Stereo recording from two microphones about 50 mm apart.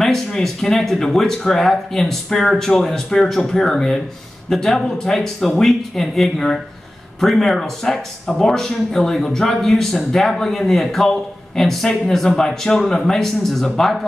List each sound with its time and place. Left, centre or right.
0.0 s speech: centre